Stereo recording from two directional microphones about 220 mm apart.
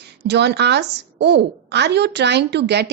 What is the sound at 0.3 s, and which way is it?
A woman's voice, 50° right (ahead or behind).